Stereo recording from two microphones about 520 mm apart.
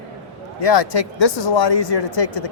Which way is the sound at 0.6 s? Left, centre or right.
Left.